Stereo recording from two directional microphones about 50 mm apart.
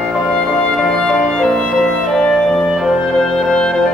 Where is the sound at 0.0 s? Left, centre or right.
Centre.